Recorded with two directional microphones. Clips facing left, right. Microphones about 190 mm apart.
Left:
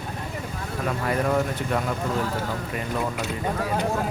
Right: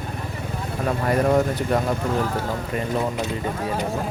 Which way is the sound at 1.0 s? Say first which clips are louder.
Right 5 dB; 40° right (ahead or behind).